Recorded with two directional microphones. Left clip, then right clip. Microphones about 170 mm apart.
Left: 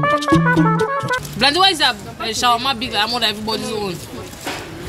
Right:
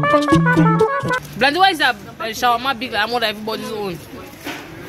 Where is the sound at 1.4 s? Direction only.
35° right (ahead or behind).